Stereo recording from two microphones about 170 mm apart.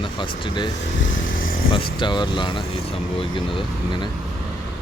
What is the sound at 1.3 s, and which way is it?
Speech, 55° left (ahead or behind).